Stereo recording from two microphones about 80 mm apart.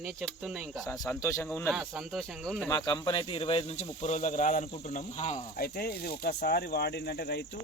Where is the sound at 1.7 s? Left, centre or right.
Centre.